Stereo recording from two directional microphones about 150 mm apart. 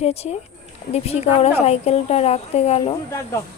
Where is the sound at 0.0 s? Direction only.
45° left (ahead or behind).